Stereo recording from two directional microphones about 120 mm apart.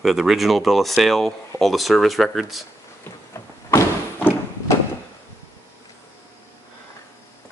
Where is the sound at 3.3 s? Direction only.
25° left (ahead or behind).